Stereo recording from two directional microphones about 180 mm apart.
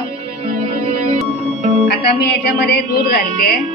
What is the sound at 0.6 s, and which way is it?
Music, 30° right (ahead or behind).